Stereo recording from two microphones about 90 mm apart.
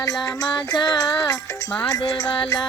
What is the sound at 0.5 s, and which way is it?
Music, 50° left (ahead or behind).